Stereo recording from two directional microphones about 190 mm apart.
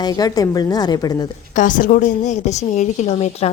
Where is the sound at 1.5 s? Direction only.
45° left (ahead or behind).